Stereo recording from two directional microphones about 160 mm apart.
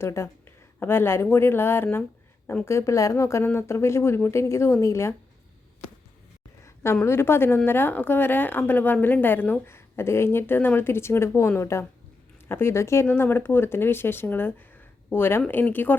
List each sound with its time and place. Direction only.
0.0 s a woman's voice: 15° left (ahead or behind)
6.9 s a woman's voice: 15° left (ahead or behind)